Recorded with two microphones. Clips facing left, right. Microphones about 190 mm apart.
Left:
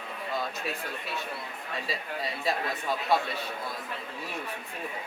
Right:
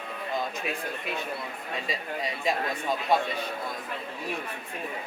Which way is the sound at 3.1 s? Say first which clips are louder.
Right 2 dB; 15° right (ahead or behind).